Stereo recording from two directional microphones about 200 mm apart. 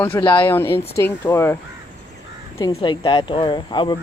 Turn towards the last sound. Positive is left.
turn(degrees=20)  # may be behind; listen again after turning